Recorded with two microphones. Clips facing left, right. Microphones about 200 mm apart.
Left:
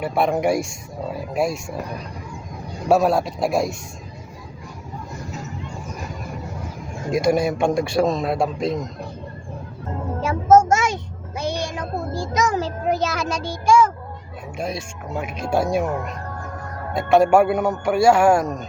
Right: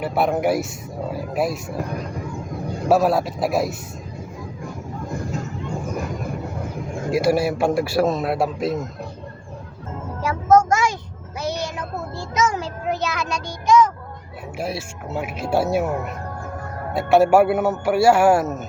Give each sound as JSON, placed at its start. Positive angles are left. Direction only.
{"t": 0.0, "sound": "a man's voice", "side_deg": -5}
{"t": 2.9, "sound": "a man's voice", "side_deg": 0}
{"t": 7.1, "sound": "a man's voice", "side_deg": -5}
{"t": 10.2, "sound": "child singing", "side_deg": 25}
{"t": 11.8, "sound": "a sound", "side_deg": 35}
{"t": 13.4, "sound": "a child's voice", "side_deg": 10}
{"t": 14.6, "sound": "speech", "side_deg": -5}